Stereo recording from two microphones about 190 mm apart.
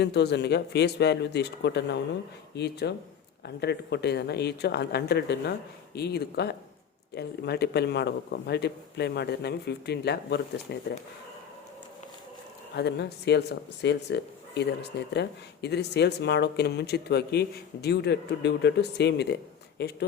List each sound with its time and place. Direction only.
0.0 s speech: 60° left (ahead or behind)
12.7 s speech: 60° left (ahead or behind)